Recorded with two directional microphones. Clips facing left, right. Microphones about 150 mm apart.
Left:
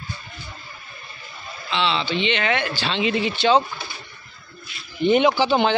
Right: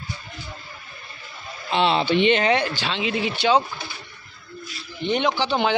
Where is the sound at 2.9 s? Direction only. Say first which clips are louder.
Left 6 dB; 5° right (ahead or behind).